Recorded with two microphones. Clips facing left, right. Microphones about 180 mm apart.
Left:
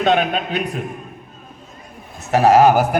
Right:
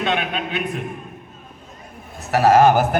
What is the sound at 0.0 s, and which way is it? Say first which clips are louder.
Speech: left 6 dB; 40° left (ahead or behind).